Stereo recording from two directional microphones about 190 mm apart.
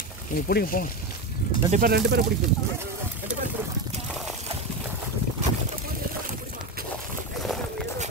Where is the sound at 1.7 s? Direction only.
50° right (ahead or behind).